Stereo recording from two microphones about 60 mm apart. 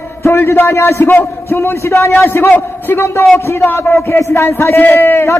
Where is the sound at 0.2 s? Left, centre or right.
Left.